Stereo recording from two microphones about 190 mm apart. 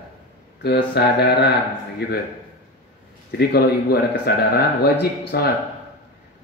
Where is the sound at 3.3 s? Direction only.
55° left (ahead or behind).